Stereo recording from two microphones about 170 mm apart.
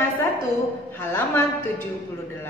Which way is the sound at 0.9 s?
15° left (ahead or behind).